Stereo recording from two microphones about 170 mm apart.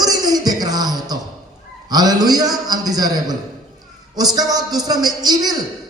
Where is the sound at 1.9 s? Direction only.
25° right (ahead or behind).